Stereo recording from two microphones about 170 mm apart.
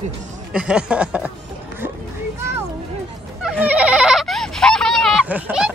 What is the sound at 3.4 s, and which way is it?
Goat, 10° right (ahead or behind).